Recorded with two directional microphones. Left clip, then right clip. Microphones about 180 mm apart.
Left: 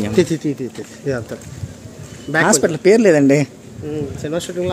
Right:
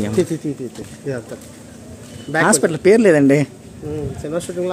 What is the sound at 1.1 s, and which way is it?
Speech, 70° left (ahead or behind).